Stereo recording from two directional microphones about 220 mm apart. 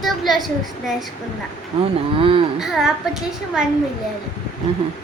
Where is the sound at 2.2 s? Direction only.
25° right (ahead or behind).